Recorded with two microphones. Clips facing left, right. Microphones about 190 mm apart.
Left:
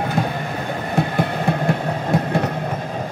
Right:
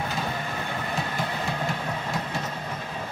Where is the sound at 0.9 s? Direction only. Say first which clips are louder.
Left 11 dB; 60° left (ahead or behind).